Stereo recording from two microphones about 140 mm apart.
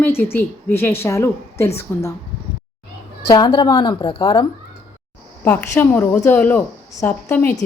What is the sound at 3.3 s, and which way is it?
A woman's voice, 30° left (ahead or behind).